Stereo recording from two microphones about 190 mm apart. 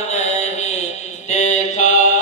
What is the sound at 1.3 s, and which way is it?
Mantra, 40° left (ahead or behind).